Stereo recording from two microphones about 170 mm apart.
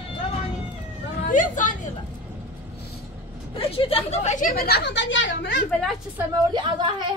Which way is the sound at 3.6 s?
35° left (ahead or behind).